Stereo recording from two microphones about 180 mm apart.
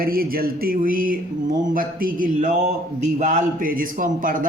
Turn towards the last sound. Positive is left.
turn(degrees=-50)  # may be behind; listen again after turning